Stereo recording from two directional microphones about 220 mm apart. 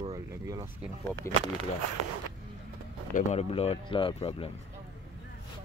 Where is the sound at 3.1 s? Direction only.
30° left (ahead or behind).